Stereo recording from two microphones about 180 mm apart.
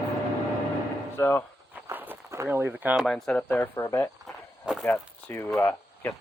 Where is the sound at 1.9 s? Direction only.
10° right (ahead or behind).